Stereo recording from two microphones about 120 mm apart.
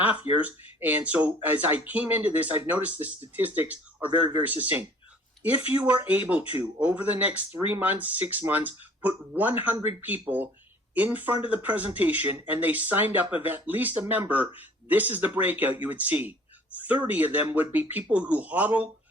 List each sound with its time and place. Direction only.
0.0 s speech: 15° right (ahead or behind)